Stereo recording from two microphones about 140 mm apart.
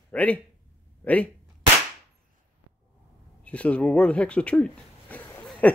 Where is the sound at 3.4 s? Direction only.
10° left (ahead or behind).